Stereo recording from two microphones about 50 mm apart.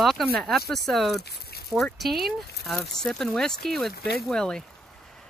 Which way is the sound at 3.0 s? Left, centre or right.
Centre.